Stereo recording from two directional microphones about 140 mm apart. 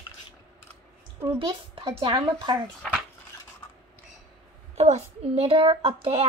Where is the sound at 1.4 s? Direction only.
40° right (ahead or behind).